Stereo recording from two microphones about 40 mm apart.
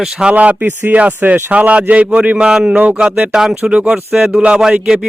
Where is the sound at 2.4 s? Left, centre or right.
Centre.